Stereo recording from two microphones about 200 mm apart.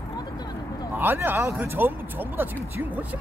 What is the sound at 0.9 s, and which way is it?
Speech, 10° right (ahead or behind).